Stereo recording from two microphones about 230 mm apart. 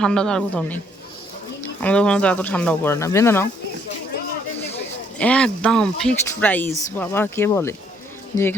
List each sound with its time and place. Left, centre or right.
0.0 s a woman's voice: centre
1.8 s speech: centre
5.1 s speech: centre